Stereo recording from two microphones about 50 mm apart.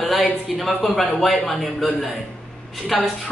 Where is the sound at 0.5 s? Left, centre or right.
Centre.